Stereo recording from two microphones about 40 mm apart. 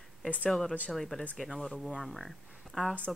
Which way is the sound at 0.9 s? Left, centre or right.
Centre.